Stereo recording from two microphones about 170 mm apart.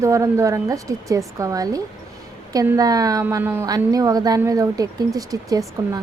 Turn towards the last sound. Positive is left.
turn(degrees=-20)  # may be behind; listen again after turning